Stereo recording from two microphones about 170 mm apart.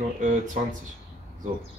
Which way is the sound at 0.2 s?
45° right (ahead or behind).